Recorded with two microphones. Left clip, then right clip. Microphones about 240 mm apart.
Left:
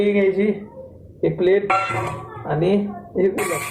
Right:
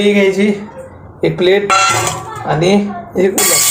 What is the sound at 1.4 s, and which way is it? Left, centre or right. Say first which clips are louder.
Speech: right 7 dB; right.